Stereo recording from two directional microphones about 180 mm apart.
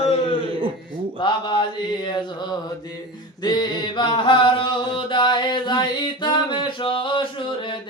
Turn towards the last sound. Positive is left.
turn(degrees=25)  # may be behind; listen again after turning